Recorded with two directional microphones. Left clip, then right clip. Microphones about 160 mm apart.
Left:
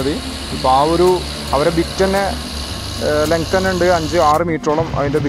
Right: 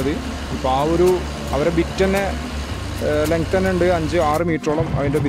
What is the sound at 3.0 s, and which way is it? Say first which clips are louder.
Speech: left 3 dB; 20° right (ahead or behind).